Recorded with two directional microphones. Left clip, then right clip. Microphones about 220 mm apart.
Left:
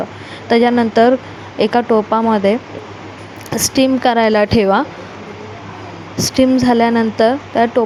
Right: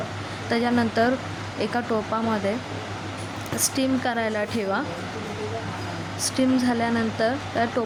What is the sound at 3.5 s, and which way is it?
Speech, 30° left (ahead or behind).